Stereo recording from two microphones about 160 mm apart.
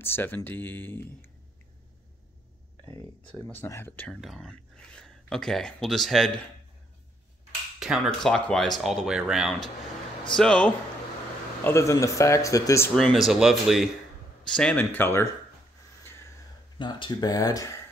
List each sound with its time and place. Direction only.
0.0 s speech: 15° left (ahead or behind)
2.8 s speech: 20° left (ahead or behind)
3.3 s speech: 5° left (ahead or behind)
7.8 s speech: centre (ahead or behind)
11.6 s speech: 20° left (ahead or behind)
12.9 s speech: 5° left (ahead or behind)
16.7 s speech: 30° left (ahead or behind)